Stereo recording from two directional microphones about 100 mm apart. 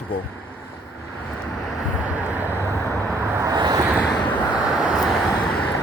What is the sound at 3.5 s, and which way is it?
Vehicle, 45° right (ahead or behind).